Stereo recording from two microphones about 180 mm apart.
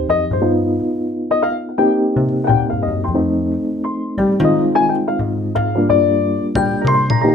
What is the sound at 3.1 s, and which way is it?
Music, 20° right (ahead or behind).